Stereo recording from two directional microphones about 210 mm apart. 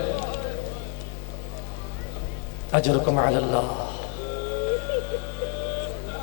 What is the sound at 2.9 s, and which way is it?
Speech, 25° left (ahead or behind).